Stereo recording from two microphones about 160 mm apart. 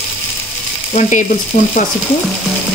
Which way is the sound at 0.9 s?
45° left (ahead or behind).